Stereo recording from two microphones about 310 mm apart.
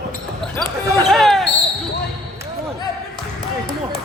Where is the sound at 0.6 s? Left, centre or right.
Centre.